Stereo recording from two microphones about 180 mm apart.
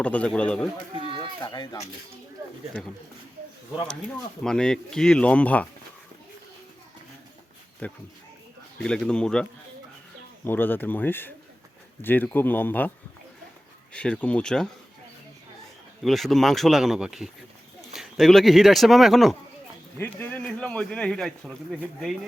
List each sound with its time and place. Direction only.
0.0 s speech: 5° left (ahead or behind)
0.9 s a sound: 30° right (ahead or behind)
1.4 s speech: 25° left (ahead or behind)
4.4 s a man's voice: 5° left (ahead or behind)
7.8 s a man's voice: 5° left (ahead or behind)
13.9 s a man's voice: 5° left (ahead or behind)
16.0 s a man's voice: centre (ahead or behind)
20.0 s a man's voice: 10° left (ahead or behind)